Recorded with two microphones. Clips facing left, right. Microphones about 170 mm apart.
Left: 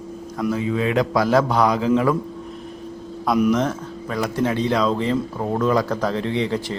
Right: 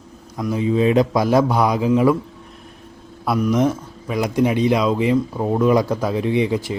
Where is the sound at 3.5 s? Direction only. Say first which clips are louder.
Right 2 dB; 10° right (ahead or behind).